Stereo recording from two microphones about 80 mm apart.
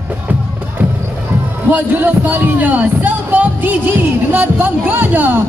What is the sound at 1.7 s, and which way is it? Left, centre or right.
Speech, right.